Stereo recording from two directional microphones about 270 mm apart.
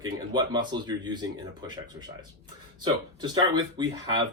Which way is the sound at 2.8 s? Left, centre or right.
Centre.